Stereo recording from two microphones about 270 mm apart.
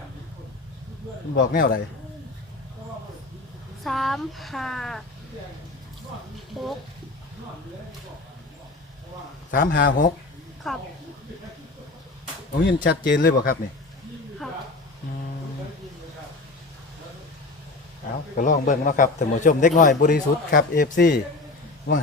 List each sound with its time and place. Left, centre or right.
1.4 s speech: left
3.8 s speech: centre
9.5 s speech: left
10.6 s speech: centre
12.6 s speech: left
18.3 s a man's voice: left